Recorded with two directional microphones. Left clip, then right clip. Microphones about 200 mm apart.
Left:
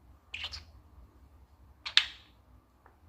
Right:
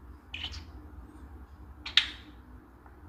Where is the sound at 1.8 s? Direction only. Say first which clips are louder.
Right 1 dB; 25° left (ahead or behind).